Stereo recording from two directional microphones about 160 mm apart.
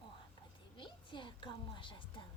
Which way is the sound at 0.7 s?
30° left (ahead or behind).